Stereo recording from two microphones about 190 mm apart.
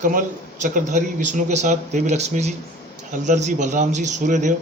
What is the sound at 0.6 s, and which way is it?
Speech, 40° right (ahead or behind).